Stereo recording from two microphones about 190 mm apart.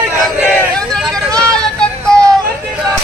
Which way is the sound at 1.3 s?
5° left (ahead or behind).